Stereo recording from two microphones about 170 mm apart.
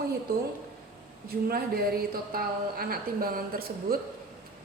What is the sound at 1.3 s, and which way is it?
A woman's voice, 65° right (ahead or behind).